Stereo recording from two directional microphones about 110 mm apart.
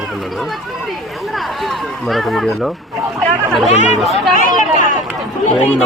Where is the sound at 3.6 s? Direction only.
90° left.